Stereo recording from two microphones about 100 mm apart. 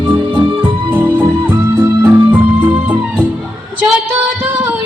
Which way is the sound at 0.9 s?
15° right (ahead or behind).